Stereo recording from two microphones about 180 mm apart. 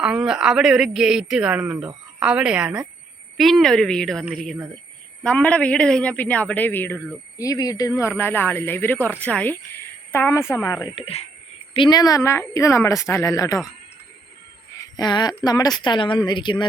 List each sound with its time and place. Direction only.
0.0 s a man's voice: 5° right (ahead or behind); by 10.8 s 15° left (ahead or behind)
10.9 s a man's voice: 35° left (ahead or behind)
14.8 s speech: 20° left (ahead or behind)